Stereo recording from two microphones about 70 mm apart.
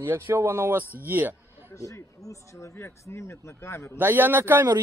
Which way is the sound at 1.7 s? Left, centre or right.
Left.